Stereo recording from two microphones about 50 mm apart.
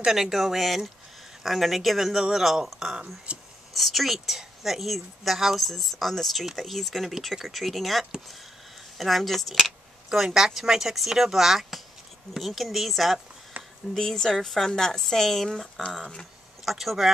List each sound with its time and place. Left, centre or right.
0.0 s speech: centre
3.3 s speech: right
3.7 s speech: centre